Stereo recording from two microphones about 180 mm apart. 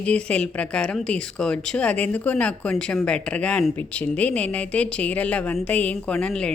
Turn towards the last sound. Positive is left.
turn(degrees=5)  # may be behind; listen again after turning